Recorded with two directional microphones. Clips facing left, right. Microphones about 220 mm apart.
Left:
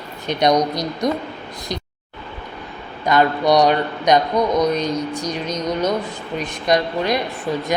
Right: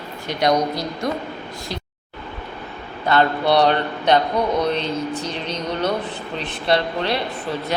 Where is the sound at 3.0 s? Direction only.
15° left (ahead or behind).